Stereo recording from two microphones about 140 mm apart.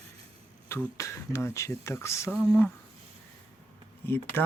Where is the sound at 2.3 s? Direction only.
10° left (ahead or behind).